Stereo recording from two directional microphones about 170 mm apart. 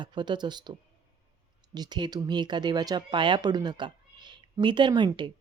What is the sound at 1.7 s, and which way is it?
Speech, 25° right (ahead or behind).